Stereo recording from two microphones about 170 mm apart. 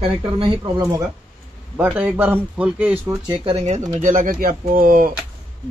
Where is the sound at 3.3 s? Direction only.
30° right (ahead or behind); by 5.1 s 55° right (ahead or behind).